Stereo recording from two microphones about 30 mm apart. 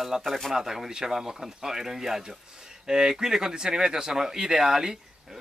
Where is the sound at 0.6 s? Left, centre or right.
Centre.